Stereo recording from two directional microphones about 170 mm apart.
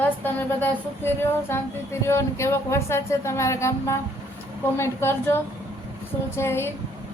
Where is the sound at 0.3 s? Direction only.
10° left (ahead or behind).